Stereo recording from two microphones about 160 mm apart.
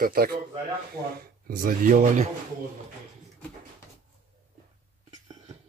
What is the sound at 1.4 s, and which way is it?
Speech, 60° right (ahead or behind).